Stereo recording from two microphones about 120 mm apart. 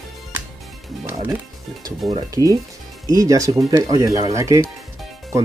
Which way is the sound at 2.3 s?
30° right (ahead or behind).